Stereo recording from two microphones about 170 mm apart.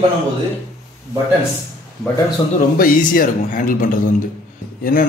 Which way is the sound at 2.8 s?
55° left (ahead or behind).